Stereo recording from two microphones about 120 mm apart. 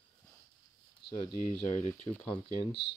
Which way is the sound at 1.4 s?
75° left (ahead or behind).